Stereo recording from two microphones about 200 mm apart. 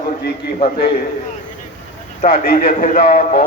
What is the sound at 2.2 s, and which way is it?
A man's voice, 45° left (ahead or behind).